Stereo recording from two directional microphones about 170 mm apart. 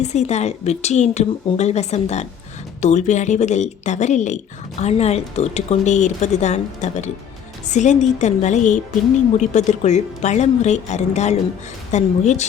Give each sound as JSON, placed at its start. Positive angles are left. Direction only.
{"t": 0.0, "sound": "speech", "side_deg": 40}